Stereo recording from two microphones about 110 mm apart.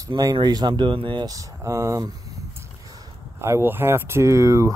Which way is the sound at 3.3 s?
25° right (ahead or behind).